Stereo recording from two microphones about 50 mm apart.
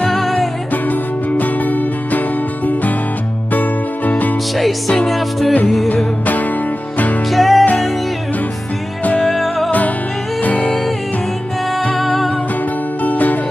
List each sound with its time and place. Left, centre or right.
0.1 s music: centre
1.3 s music: left
4.6 s music: centre
7.3 s music: centre
9.2 s music: centre
10.4 s music: left
11.9 s music: centre
13.0 s music: left